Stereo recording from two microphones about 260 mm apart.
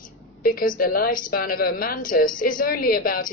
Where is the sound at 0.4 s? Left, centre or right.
Left.